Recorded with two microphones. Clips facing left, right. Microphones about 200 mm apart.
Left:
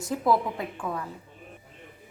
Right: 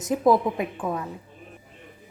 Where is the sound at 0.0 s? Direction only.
20° right (ahead or behind).